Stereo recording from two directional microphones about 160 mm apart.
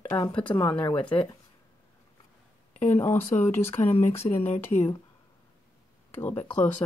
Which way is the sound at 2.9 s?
15° left (ahead or behind).